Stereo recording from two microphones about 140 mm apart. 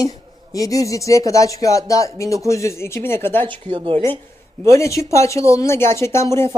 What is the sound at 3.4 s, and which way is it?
Speech, 40° right (ahead or behind).